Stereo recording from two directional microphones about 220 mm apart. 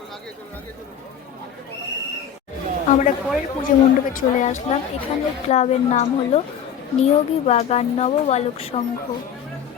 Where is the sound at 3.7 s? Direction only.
40° left (ahead or behind).